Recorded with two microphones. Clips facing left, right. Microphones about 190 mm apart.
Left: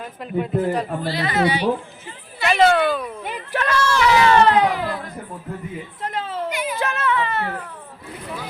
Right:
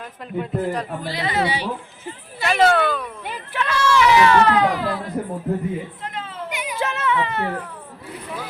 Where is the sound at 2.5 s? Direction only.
Centre (ahead or behind).